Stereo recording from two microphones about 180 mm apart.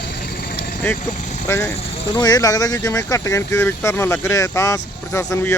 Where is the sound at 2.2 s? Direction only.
20° left (ahead or behind).